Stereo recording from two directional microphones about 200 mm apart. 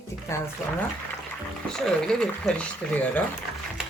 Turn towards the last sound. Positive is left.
turn(degrees=5)  # may be behind; listen again after turning